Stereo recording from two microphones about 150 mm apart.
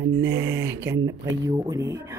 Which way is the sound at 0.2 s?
15° right (ahead or behind).